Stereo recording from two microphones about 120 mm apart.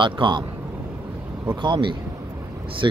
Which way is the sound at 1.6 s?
40° right (ahead or behind).